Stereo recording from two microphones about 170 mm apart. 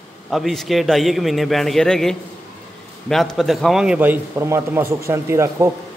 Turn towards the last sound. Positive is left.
turn(degrees=-15)  # may be behind; listen again after turning